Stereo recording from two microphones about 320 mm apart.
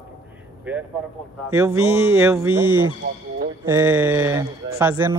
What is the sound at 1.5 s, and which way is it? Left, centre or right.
Speech, centre.